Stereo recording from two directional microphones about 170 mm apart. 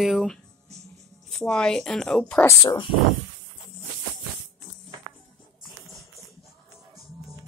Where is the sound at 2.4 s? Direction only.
25° left (ahead or behind).